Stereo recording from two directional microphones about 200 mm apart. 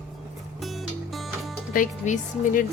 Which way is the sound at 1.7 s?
40° left (ahead or behind).